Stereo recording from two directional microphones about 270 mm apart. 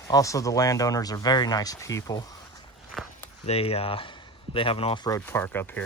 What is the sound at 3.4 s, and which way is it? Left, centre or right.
Speech, left.